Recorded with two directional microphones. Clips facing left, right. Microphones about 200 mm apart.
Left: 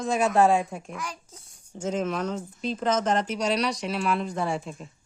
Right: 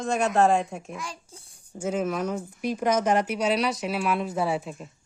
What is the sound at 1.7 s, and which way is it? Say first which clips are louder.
Speech: right 1 dB; 10° right (ahead or behind).